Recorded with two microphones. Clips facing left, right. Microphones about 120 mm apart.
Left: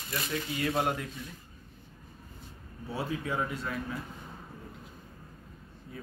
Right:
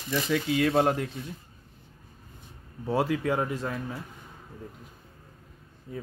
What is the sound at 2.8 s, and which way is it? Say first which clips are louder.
Speech: right 8 dB; 90° right.